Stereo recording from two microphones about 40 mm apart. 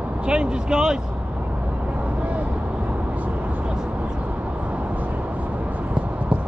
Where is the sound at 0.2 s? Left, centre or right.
Right.